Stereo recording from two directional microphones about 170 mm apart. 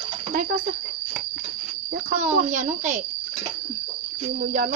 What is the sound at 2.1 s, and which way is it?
Speech, 40° right (ahead or behind).